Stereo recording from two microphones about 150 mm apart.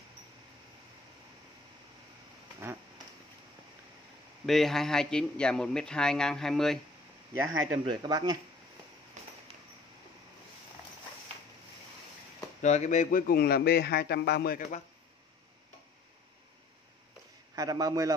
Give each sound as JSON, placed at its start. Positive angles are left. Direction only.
{"t": 4.5, "sound": "a man's voice", "side_deg": 0}
{"t": 7.8, "sound": "speech", "side_deg": -30}
{"t": 12.6, "sound": "a man's voice", "side_deg": 50}
{"t": 17.6, "sound": "a man's voice", "side_deg": -25}